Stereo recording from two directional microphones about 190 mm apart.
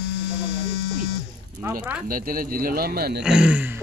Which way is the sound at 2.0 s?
50° right (ahead or behind).